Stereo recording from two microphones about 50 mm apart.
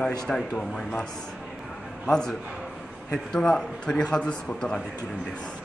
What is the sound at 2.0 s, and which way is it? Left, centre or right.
A man's voice, centre.